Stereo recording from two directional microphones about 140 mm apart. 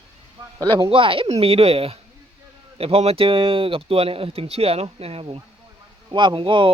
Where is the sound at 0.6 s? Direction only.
30° right (ahead or behind); by 5.4 s 45° right (ahead or behind).